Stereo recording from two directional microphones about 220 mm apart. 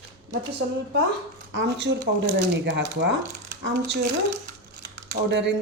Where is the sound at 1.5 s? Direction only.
55° right (ahead or behind).